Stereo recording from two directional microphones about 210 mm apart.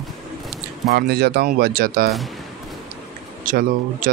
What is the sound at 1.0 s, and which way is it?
Speech, 50° right (ahead or behind).